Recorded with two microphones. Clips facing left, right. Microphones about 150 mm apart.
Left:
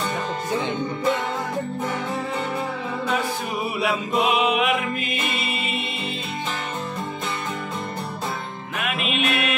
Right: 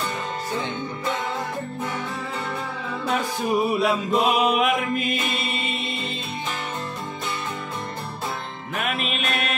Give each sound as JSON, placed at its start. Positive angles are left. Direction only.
{"t": 3.8, "sound": "mantra", "side_deg": 5}
{"t": 4.3, "sound": "music", "side_deg": -40}
{"t": 5.4, "sound": "choir", "side_deg": 5}
{"t": 8.7, "sound": "music", "side_deg": -40}